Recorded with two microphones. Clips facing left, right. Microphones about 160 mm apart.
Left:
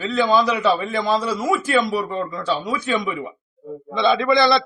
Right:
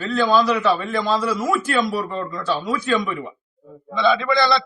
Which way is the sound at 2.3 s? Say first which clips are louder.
Right 3 dB; 20° left (ahead or behind).